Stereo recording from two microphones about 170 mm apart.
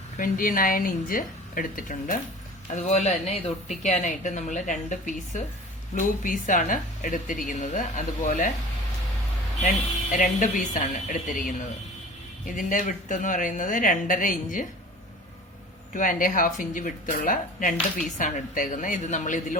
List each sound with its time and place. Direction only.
0.2 s a woman's voice: 55° left (ahead or behind)
2.8 s a woman's voice: 45° left (ahead or behind)
9.6 s a woman's voice: 50° left (ahead or behind)
15.9 s a woman's voice: 50° left (ahead or behind)